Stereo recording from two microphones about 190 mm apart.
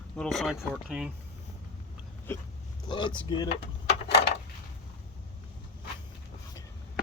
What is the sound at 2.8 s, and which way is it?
Speech, 25° left (ahead or behind).